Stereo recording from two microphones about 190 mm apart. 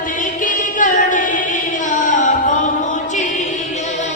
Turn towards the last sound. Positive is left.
turn(degrees=40)  # may be behind; listen again after turning